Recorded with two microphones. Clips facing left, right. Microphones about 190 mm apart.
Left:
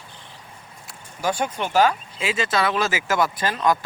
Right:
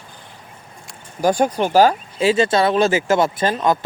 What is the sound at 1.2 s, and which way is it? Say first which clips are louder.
Speech: right 8 dB; 40° right (ahead or behind).